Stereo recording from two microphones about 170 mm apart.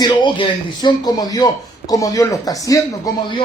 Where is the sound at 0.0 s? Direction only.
25° left (ahead or behind).